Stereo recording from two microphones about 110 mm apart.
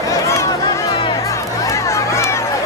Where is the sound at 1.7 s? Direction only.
25° left (ahead or behind).